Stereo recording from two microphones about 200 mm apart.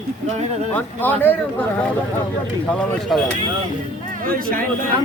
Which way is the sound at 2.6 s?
5° left (ahead or behind).